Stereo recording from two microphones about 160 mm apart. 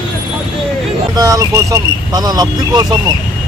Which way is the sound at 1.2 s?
20° right (ahead or behind).